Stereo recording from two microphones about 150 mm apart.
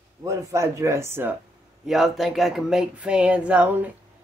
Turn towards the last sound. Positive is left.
turn(degrees=-10)  # may be behind; listen again after turning